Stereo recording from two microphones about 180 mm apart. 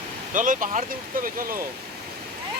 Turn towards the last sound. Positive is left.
turn(degrees=-50)  # may be behind; listen again after turning